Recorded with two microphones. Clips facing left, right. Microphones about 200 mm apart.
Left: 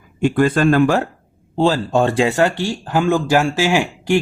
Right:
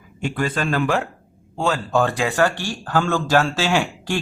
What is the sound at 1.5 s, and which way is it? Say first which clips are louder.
Speech: left 5 dB; 30° left (ahead or behind).